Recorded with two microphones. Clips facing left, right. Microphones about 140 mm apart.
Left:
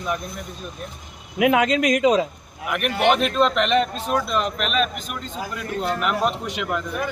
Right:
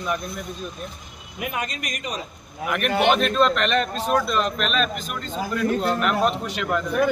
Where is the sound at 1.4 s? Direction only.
90° left.